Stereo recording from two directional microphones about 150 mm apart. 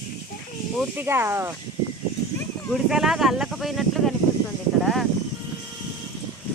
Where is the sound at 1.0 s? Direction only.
15° right (ahead or behind).